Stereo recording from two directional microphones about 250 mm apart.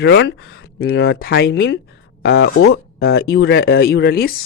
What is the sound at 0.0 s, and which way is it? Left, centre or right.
Speech, left.